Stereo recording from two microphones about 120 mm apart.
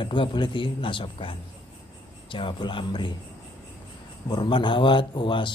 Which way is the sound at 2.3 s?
45° left (ahead or behind).